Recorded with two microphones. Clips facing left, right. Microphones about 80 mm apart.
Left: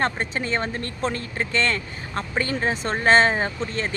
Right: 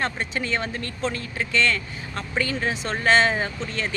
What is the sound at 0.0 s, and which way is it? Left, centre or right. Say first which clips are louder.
Speech: left 2 dB; left.